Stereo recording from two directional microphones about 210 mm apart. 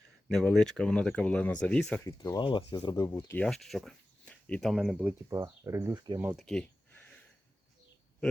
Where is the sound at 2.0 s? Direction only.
15° left (ahead or behind).